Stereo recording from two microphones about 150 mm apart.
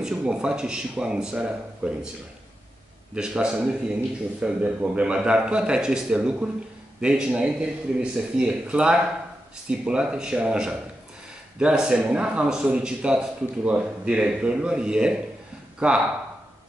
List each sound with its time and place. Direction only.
0.0 s speech: 5° right (ahead or behind)
3.2 s a man's voice: 5° right (ahead or behind)